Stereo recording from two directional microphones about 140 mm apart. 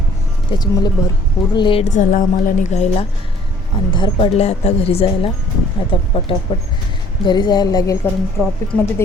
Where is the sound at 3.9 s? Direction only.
35° left (ahead or behind).